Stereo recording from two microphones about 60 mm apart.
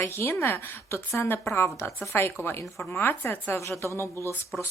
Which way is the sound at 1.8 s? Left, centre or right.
Left.